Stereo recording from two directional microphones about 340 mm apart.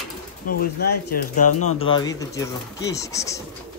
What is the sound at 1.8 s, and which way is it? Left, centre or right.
Speech, centre.